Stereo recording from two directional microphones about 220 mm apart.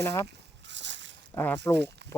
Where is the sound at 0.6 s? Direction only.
55° right (ahead or behind).